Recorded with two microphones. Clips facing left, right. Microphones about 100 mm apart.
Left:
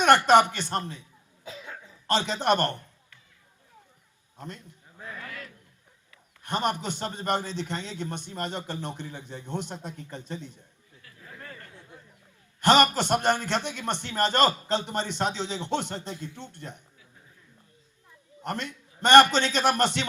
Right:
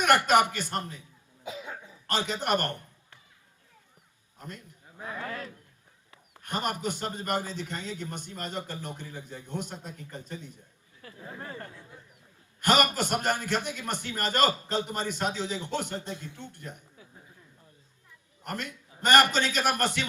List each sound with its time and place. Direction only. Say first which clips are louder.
0.0 s a man's voice: left 4 dB; 30° left (ahead or behind)
1.5 s cough: right 3 dB; 15° right (ahead or behind)
2.0 s a man's voice: left 4 dB; 25° left (ahead or behind)
4.4 s a man's voice: left 2 dB; 25° left (ahead or behind)
4.9 s a man's voice: right 4 dB; 20° right (ahead or behind)
6.4 s a man's voice: left 3 dB; 25° left (ahead or behind)
11.0 s speech: right 5 dB; 30° right (ahead or behind)
12.6 s a man's voice: left 4 dB; 25° left (ahead or behind)
18.4 s a man's voice: left 3 dB; 25° left (ahead or behind)